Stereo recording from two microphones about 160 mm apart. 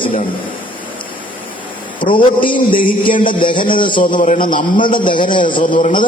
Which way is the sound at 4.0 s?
60° left (ahead or behind).